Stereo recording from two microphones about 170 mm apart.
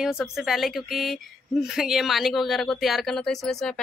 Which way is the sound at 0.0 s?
Centre (ahead or behind).